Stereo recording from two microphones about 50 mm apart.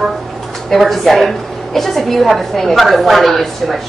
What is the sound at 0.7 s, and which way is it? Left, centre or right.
A woman's voice, centre.